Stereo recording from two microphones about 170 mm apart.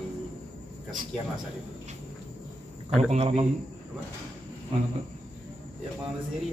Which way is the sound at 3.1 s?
35° right (ahead or behind).